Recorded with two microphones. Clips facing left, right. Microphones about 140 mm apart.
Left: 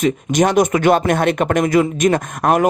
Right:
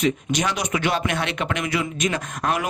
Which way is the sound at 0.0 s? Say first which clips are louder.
Left 7 dB; 50° left (ahead or behind).